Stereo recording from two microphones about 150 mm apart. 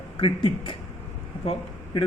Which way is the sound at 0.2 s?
35° left (ahead or behind).